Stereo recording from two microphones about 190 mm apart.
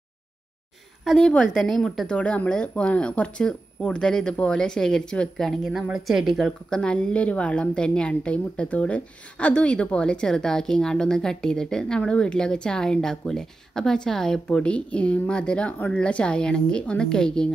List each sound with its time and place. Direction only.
1.0 s speech: 5° left (ahead or behind)